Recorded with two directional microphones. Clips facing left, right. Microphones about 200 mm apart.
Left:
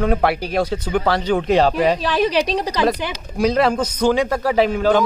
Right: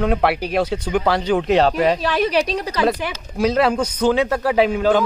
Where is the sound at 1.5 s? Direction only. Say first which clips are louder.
Even; 5° left (ahead or behind).